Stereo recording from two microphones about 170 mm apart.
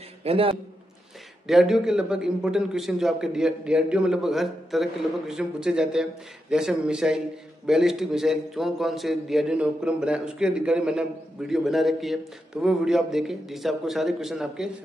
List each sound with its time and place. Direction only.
0.2 s a man's voice: 35° right (ahead or behind)
1.5 s a man's voice: centre (ahead or behind)